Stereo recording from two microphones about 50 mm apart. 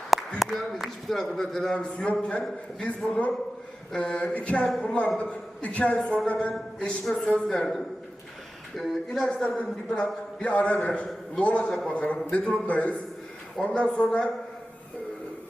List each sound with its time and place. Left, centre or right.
0.3 s a man's voice: centre; by 14.3 s left